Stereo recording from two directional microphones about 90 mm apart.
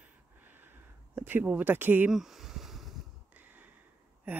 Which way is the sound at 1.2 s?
20° right (ahead or behind).